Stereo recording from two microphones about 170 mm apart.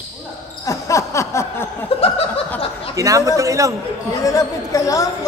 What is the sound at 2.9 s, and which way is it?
Speech, 20° right (ahead or behind).